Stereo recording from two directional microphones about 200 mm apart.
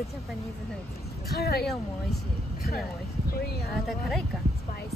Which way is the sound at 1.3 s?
50° left (ahead or behind).